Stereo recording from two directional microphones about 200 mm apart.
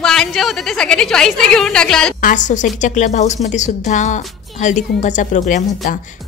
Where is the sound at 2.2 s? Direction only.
40° left (ahead or behind).